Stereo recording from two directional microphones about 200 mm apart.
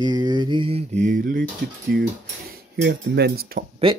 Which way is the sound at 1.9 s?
50° right (ahead or behind).